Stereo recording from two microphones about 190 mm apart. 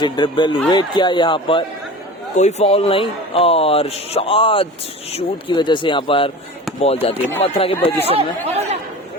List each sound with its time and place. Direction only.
0.0 s speech: 25° left (ahead or behind)
8.0 s speech: 35° right (ahead or behind)